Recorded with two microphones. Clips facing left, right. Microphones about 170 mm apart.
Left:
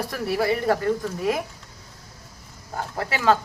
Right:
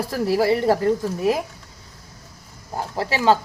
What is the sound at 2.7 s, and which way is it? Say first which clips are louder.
Speech: right 3 dB; 30° right (ahead or behind).